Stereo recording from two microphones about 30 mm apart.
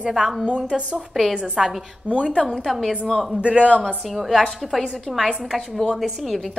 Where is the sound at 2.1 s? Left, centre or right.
Right.